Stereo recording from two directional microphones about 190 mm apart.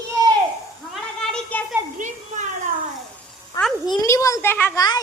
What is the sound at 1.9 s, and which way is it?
Speech, 40° right (ahead or behind).